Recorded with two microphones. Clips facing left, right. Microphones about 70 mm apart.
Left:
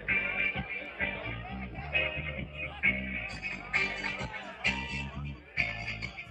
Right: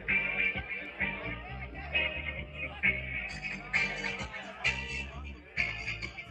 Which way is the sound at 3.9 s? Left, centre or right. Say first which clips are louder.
Left 1 dB; left.